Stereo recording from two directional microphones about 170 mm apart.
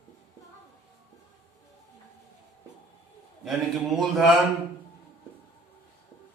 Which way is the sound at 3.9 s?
Centre (ahead or behind).